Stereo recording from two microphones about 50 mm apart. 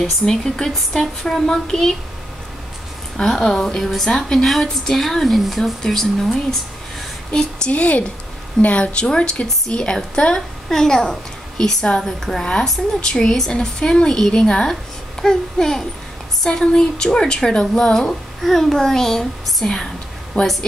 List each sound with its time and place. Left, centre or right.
0.2 s speech: centre
3.2 s speech: centre
7.7 s a woman's voice: left
9.0 s a woman's voice: centre
20.4 s a woman's voice: left